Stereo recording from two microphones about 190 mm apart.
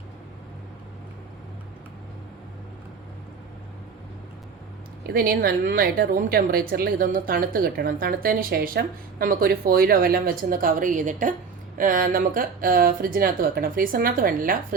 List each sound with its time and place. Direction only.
5.0 s a woman's voice: 50° right (ahead or behind)